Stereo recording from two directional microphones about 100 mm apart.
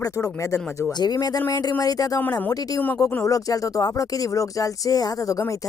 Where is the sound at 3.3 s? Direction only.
35° left (ahead or behind).